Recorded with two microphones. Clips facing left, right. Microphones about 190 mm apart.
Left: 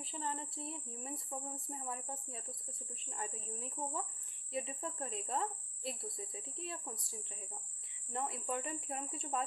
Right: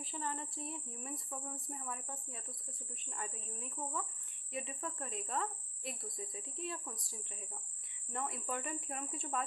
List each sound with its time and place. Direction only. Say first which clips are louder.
0.0 s speech: even; 25° left (ahead or behind)